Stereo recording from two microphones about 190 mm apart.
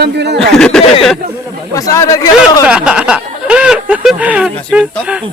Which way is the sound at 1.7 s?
20° left (ahead or behind).